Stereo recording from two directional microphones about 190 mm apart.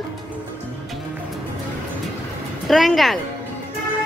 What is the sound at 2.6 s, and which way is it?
Speech, centre (ahead or behind).